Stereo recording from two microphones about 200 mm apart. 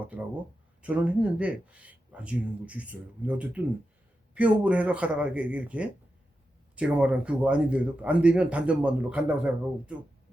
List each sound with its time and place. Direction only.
0.0 s a man's voice: 10° right (ahead or behind)